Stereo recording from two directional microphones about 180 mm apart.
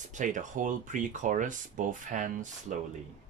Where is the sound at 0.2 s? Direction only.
45° right (ahead or behind).